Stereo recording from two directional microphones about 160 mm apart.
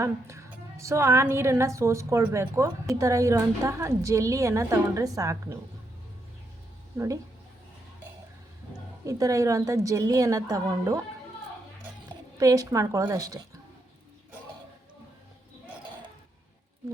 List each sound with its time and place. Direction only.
0.0 s a woman's voice: 20° right (ahead or behind)
6.9 s a woman's voice: 20° right (ahead or behind)
9.0 s a woman's voice: 20° right (ahead or behind)
12.0 s speech: 20° right (ahead or behind)